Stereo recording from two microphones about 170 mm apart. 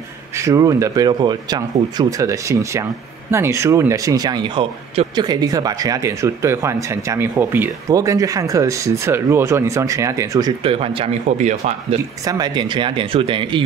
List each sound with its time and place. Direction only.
0.4 s speech: 20° right (ahead or behind)
10.6 s speech: 35° right (ahead or behind)
12.3 s speech: 25° right (ahead or behind)